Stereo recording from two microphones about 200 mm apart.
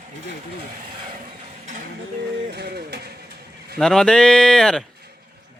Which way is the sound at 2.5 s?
55° right (ahead or behind).